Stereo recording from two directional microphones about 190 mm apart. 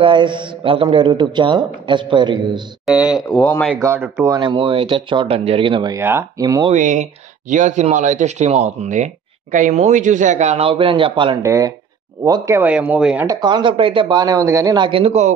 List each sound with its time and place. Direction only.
0.0 s a man's voice: 25° right (ahead or behind)
2.8 s speech: 5° right (ahead or behind)
3.3 s speech: 5° left (ahead or behind)
3.8 s a man's voice: 15° right (ahead or behind)
5.9 s speech: 15° right (ahead or behind)
6.7 s speech: 40° right (ahead or behind)
11.4 s speech: 15° right (ahead or behind)
13.3 s a man's voice: 20° right (ahead or behind)